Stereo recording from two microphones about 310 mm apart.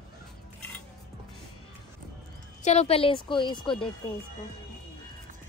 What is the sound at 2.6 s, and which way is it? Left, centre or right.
A woman's voice, centre.